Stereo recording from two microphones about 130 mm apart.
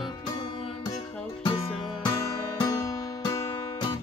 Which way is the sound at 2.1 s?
30° left (ahead or behind).